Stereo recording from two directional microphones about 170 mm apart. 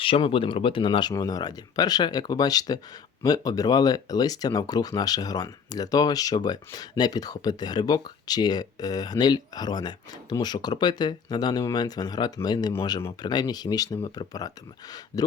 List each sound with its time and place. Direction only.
0.0 s speech: 30° left (ahead or behind)